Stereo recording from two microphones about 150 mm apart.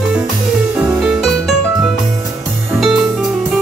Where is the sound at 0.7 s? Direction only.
5° right (ahead or behind).